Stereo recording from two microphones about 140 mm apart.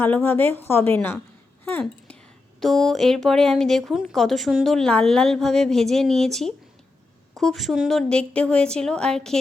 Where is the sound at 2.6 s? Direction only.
Centre (ahead or behind).